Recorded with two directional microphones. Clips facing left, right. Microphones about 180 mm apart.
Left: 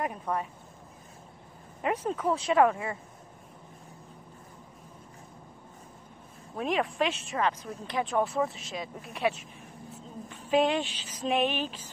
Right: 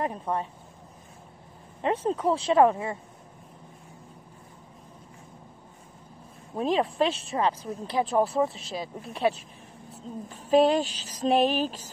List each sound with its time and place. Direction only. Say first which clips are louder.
0.0 s speech: right 2 dB; 30° right (ahead or behind)
1.8 s speech: right 4 dB; 30° right (ahead or behind)
6.5 s speech: right 4 dB; 30° right (ahead or behind)